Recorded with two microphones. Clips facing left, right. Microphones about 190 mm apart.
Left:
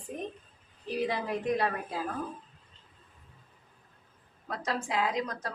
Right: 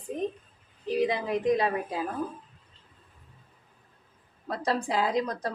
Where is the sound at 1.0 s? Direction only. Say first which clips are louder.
Right 4 dB; 15° right (ahead or behind).